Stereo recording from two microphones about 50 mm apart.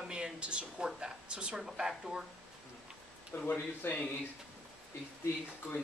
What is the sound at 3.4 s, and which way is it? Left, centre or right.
Speech, left.